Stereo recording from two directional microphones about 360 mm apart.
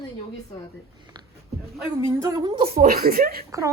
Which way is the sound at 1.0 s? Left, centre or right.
Centre.